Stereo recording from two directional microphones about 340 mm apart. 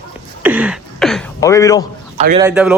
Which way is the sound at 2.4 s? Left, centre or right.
Centre.